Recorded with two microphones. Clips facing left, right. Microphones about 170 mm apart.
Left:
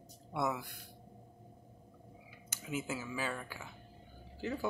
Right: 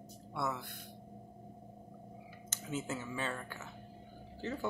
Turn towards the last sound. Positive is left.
turn(degrees=10)  # may be behind; listen again after turning